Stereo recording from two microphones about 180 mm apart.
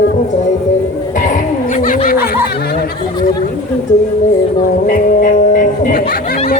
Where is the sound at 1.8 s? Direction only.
45° left (ahead or behind).